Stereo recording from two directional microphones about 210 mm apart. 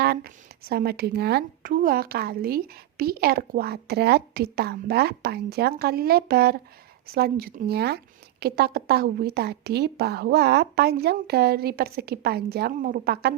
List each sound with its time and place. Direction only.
0.0 s a woman's voice: 50° right (ahead or behind)